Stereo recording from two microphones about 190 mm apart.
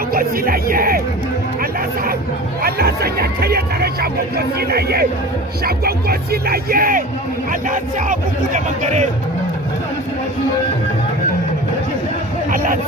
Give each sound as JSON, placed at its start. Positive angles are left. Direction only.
{"t": 0.1, "sound": "music", "side_deg": -50}
{"t": 2.6, "sound": "speech", "side_deg": -55}